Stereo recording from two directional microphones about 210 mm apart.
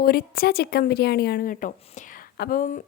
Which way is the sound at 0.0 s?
45° left (ahead or behind).